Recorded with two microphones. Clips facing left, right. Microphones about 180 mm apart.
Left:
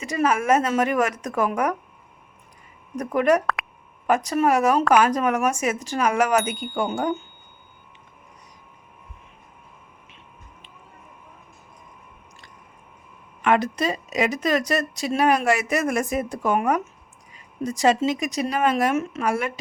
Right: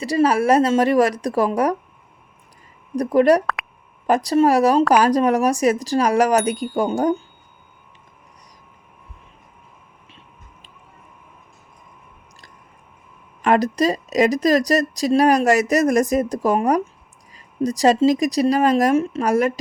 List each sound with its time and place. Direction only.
0.0 s speech: 35° right (ahead or behind)
2.9 s speech: 35° right (ahead or behind)
3.4 s a sound: centre (ahead or behind)
4.0 s speech: 35° right (ahead or behind)
13.4 s speech: 40° right (ahead or behind)